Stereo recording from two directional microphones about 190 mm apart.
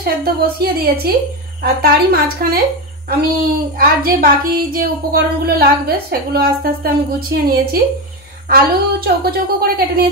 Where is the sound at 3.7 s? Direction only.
50° right (ahead or behind).